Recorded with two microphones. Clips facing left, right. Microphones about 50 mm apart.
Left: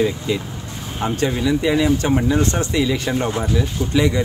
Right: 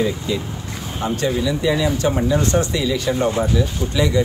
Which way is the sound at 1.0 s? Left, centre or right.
Left.